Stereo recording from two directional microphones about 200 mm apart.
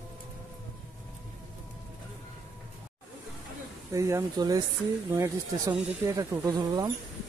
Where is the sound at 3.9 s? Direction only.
15° right (ahead or behind).